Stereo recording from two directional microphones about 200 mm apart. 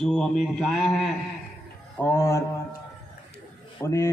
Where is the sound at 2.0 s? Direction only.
10° left (ahead or behind).